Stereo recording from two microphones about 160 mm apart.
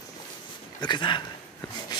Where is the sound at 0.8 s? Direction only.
30° left (ahead or behind).